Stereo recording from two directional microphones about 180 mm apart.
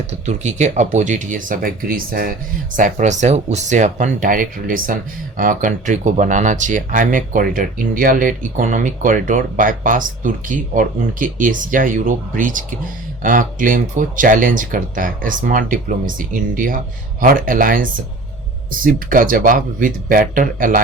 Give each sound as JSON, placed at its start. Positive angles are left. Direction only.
{"t": 0.1, "sound": "speech", "side_deg": -40}
{"t": 2.7, "sound": "speech", "side_deg": -45}